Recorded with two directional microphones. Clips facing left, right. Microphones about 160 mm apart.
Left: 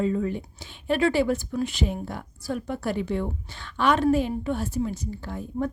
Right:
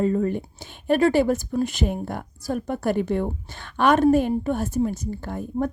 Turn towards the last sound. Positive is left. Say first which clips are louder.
# right 3 dB
turn(degrees=-50)  # may be behind; listen again after turning